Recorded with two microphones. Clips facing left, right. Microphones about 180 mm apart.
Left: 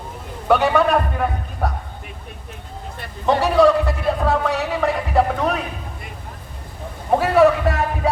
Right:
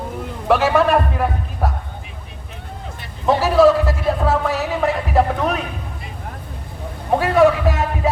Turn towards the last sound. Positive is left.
turn(degrees=0)  # may be behind; listen again after turning